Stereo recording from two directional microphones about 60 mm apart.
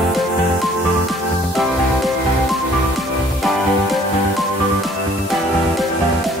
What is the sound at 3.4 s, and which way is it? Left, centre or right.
Music, centre.